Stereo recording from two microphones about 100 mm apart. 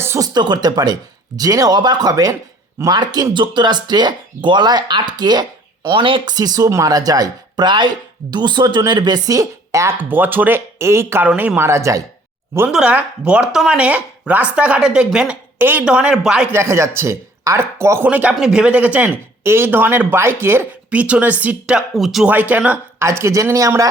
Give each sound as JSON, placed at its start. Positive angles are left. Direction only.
{"t": 0.2, "sound": "speech", "side_deg": -45}
{"t": 6.3, "sound": "speech", "side_deg": -40}
{"t": 10.0, "sound": "speech", "side_deg": -20}
{"t": 12.6, "sound": "speech", "side_deg": -10}
{"t": 15.5, "sound": "speech", "side_deg": -20}
{"t": 15.8, "sound": "speech", "side_deg": -10}
{"t": 16.5, "sound": "speech", "side_deg": -25}
{"t": 18.1, "sound": "speech", "side_deg": -15}
{"t": 21.0, "sound": "speech", "side_deg": -15}
{"t": 21.8, "sound": "speech", "side_deg": 0}
{"t": 22.3, "sound": "speech", "side_deg": -15}
{"t": 23.0, "sound": "speech", "side_deg": -25}